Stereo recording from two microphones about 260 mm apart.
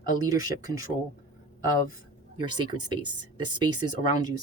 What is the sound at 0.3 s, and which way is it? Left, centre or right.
Speech, centre.